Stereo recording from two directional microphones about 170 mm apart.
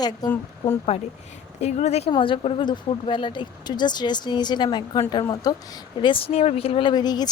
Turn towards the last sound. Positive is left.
turn(degrees=25)  # may be behind; listen again after turning